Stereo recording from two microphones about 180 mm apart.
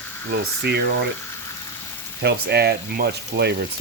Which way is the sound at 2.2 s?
60° right (ahead or behind).